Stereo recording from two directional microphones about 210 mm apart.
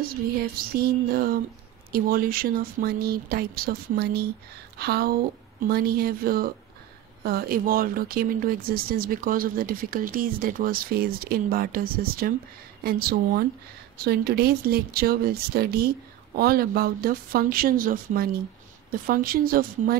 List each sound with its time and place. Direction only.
0.0 s speech: 45° right (ahead or behind)